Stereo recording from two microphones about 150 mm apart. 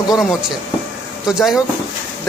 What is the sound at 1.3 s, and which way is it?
Speech, 5° right (ahead or behind).